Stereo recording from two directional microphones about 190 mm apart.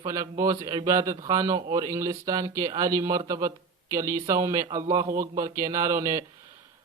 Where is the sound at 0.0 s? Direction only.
20° right (ahead or behind).